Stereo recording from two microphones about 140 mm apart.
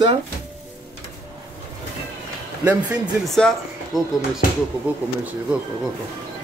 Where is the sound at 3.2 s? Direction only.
Centre (ahead or behind).